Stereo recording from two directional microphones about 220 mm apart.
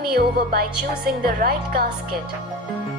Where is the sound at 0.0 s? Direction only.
45° right (ahead or behind).